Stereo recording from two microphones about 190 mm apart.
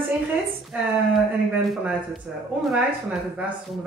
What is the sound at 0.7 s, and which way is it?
Speech, 10° right (ahead or behind).